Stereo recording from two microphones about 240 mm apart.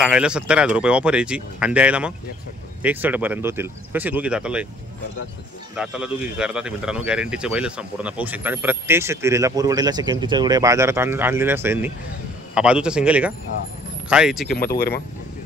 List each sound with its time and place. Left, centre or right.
0.0 s speech: centre
5.8 s speech: centre
14.5 s speech: left